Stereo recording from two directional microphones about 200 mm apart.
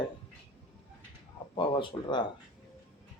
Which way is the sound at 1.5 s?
25° left (ahead or behind).